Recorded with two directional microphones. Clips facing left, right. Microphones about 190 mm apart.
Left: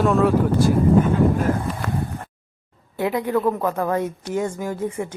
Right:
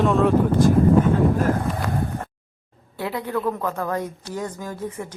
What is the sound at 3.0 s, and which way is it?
Speech, 15° left (ahead or behind).